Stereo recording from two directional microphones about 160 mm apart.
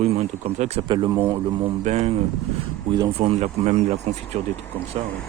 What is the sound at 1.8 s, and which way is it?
Speech, 40° right (ahead or behind).